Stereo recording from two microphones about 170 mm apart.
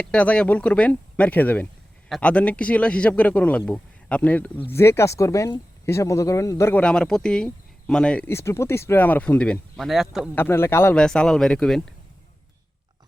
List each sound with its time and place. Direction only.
0.0 s speech: 10° left (ahead or behind)
8.3 s speech: 15° left (ahead or behind); by 10.2 s centre (ahead or behind)
10.3 s speech: 10° left (ahead or behind)